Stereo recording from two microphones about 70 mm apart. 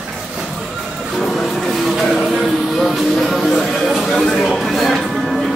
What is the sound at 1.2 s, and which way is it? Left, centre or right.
Music, centre.